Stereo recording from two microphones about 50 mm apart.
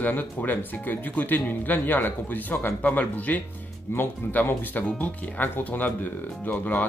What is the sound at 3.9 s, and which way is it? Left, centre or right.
Speech, left.